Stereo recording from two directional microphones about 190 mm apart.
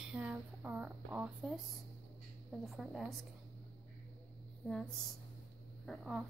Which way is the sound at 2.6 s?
Centre (ahead or behind).